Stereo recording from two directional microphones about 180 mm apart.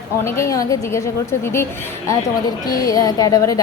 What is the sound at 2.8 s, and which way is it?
Speech, 20° left (ahead or behind).